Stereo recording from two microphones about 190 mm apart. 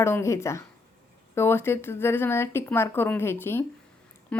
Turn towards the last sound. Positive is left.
turn(degrees=5)  # may be behind; listen again after turning